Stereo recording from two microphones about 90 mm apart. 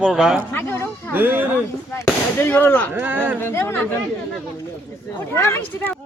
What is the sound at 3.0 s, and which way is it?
Speech, 20° right (ahead or behind).